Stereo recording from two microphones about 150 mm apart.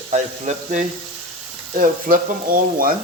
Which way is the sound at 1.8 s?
65° right (ahead or behind).